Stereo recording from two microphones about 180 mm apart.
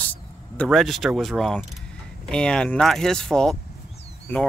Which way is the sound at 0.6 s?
Centre (ahead or behind).